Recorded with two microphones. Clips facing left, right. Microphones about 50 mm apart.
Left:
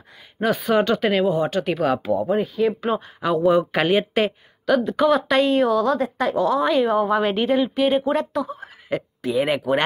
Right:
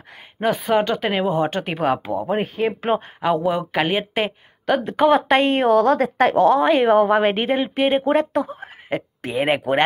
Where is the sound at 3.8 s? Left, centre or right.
Right.